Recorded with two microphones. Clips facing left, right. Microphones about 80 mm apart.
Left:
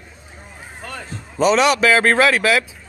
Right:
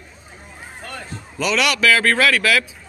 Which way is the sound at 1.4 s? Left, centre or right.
Left.